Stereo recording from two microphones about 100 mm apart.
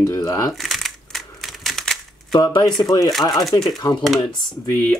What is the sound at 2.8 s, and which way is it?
Speech, 40° left (ahead or behind).